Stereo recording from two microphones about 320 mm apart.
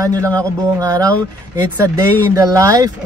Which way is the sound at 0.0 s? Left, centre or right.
Centre.